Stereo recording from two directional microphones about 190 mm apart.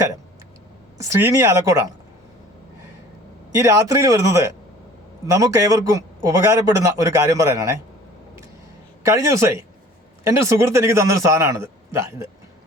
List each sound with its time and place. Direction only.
0.9 s speech: 15° right (ahead or behind)
3.5 s speech: 15° right (ahead or behind)
9.0 s speech: 15° right (ahead or behind)